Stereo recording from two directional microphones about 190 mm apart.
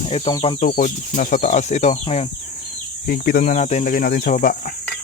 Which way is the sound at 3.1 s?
50° left (ahead or behind).